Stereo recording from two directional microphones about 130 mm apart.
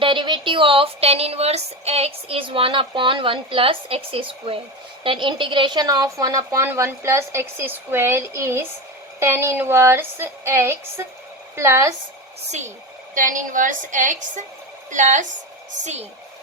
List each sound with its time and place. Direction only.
0.0 s a woman's voice: 40° right (ahead or behind); by 11.9 s 20° right (ahead or behind)
12.5 s a woman's voice: 65° right (ahead or behind)
13.1 s a woman's voice: 85° right; by 16.0 s 60° right (ahead or behind)